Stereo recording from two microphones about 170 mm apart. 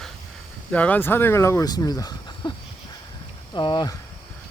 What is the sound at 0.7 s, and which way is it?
Speech, 10° left (ahead or behind).